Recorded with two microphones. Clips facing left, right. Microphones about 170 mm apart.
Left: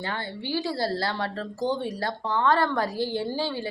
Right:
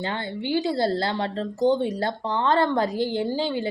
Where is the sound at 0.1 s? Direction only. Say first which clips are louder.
Right 4 dB; 20° right (ahead or behind).